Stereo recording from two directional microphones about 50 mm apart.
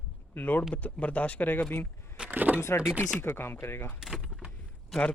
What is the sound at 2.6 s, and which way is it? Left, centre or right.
Speech, left.